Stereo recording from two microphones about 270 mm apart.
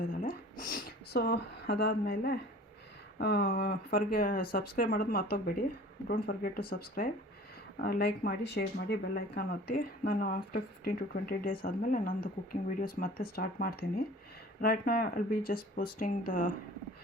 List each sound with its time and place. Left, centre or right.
0.0 s speech: left